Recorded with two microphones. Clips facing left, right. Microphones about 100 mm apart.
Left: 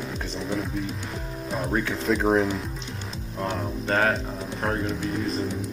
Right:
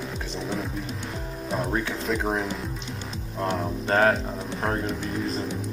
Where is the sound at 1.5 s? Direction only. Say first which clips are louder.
Left 1 dB; centre (ahead or behind).